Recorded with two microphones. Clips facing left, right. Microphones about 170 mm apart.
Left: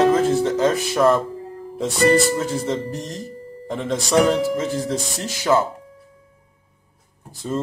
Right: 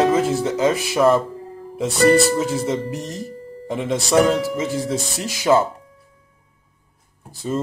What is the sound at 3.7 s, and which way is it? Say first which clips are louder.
Speech: right 1 dB; 5° right (ahead or behind).